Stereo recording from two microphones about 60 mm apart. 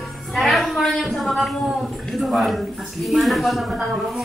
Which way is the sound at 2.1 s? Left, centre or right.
Centre.